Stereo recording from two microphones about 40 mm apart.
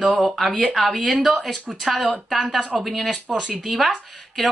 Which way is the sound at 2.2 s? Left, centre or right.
Centre.